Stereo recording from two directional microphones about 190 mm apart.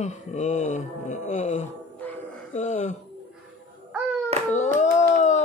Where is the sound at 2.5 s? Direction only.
40° left (ahead or behind).